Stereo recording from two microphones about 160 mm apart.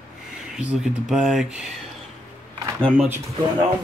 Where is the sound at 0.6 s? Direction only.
5° right (ahead or behind).